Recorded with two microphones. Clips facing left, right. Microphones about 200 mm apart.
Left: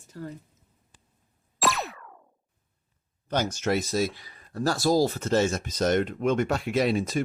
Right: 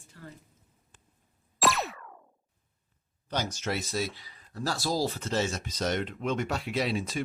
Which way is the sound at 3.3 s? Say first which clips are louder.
Left 6 dB; 50° left (ahead or behind).